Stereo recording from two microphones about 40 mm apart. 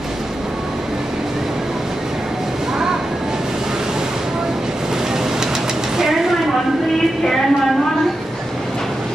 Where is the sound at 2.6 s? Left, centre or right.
Centre.